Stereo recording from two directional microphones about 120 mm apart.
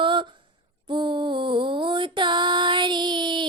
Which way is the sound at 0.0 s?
40° right (ahead or behind).